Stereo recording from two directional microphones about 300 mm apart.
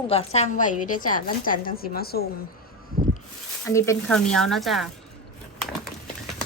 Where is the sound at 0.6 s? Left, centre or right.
Left.